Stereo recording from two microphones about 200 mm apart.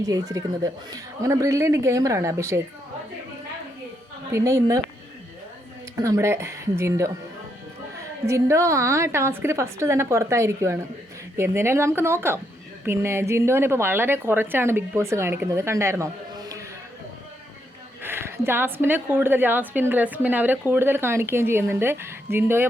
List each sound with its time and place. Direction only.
0.0 s a woman's voice: 15° right (ahead or behind)
4.3 s a woman's voice: 15° right (ahead or behind)
6.0 s a woman's voice: 15° right (ahead or behind)
18.0 s a woman's voice: 10° right (ahead or behind)